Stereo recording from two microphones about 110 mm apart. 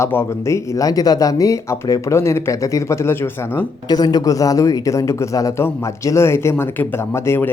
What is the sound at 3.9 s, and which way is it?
Speech, 40° left (ahead or behind).